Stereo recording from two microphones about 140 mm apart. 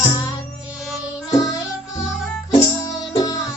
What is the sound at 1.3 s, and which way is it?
Music, 25° left (ahead or behind).